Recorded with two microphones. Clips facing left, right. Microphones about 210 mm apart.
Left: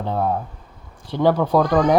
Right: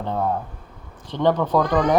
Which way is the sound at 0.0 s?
10° left (ahead or behind).